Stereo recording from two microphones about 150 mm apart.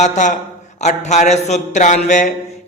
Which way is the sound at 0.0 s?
55° left (ahead or behind).